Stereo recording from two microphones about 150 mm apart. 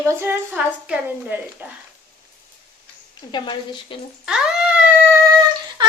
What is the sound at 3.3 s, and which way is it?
Speech, 30° left (ahead or behind).